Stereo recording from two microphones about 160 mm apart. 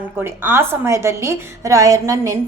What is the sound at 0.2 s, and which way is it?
A woman's voice, 15° right (ahead or behind).